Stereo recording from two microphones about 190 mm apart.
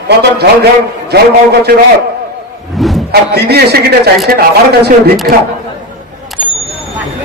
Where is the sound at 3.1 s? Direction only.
55° right (ahead or behind).